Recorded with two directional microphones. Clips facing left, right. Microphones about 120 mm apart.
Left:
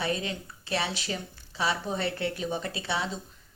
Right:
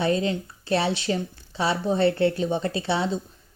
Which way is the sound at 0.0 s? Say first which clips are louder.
Right 8 dB; 30° right (ahead or behind).